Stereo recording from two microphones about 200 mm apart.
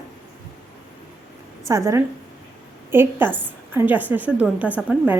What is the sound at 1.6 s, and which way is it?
A woman's voice, 15° right (ahead or behind).